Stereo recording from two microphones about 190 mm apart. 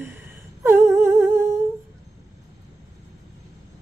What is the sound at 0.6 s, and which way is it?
Humming, 15° right (ahead or behind).